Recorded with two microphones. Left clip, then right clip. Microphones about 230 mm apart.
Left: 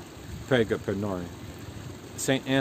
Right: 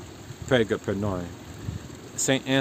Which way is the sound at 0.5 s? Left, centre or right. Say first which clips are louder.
Right 2 dB; centre.